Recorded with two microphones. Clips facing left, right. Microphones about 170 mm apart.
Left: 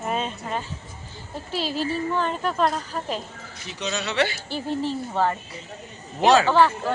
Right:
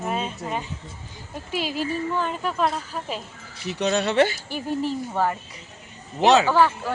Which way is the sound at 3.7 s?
60° right (ahead or behind).